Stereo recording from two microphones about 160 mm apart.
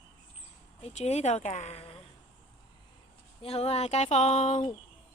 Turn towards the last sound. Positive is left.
turn(degrees=45)  # may be behind; listen again after turning